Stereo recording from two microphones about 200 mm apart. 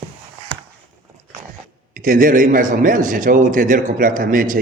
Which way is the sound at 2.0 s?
45° right (ahead or behind).